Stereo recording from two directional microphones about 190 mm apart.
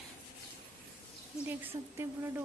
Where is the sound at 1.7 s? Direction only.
25° right (ahead or behind).